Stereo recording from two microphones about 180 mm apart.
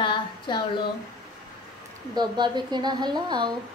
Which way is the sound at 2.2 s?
25° right (ahead or behind).